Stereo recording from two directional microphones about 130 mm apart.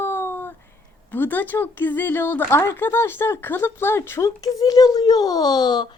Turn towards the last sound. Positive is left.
turn(degrees=35)  # may be behind; listen again after turning